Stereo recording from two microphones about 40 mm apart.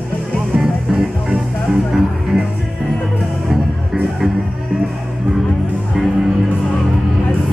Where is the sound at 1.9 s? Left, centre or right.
Centre.